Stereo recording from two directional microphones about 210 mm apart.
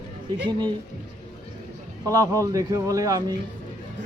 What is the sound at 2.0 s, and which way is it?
Speech, 15° right (ahead or behind).